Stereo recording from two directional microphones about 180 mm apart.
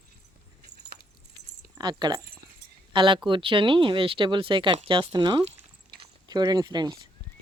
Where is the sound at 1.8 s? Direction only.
25° right (ahead or behind).